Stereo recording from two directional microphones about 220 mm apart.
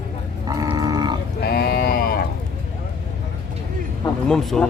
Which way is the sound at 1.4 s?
45° left (ahead or behind).